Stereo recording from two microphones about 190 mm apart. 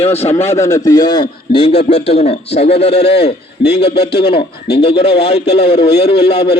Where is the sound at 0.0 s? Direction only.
30° left (ahead or behind).